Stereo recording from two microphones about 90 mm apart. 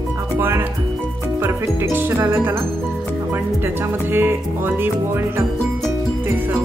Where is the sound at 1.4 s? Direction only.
30° right (ahead or behind).